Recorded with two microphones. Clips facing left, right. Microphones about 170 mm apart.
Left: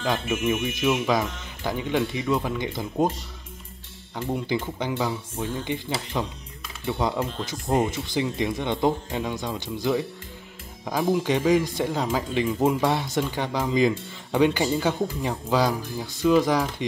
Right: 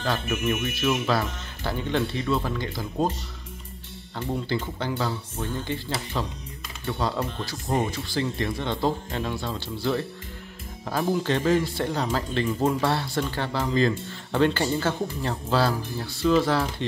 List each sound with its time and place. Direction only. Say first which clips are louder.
0.0 s speech: left 2 dB; 15° left (ahead or behind)
4.3 s speech: left 1 dB; 15° left (ahead or behind)